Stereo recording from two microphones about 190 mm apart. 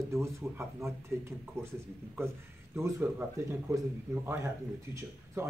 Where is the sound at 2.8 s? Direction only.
15° right (ahead or behind).